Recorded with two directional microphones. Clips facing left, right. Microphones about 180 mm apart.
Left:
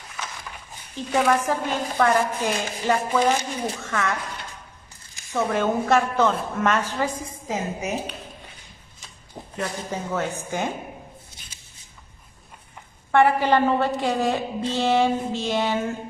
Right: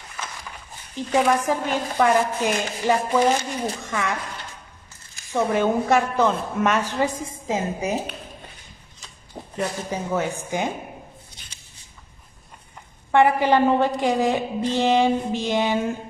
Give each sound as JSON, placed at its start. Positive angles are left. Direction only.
{"t": 1.2, "sound": "chopping", "side_deg": -15}
{"t": 5.3, "sound": "chopping", "side_deg": -15}
{"t": 7.2, "sound": "a woman's voice", "side_deg": -25}
{"t": 9.6, "sound": "chopping", "side_deg": -10}
{"t": 13.1, "sound": "chopping", "side_deg": -15}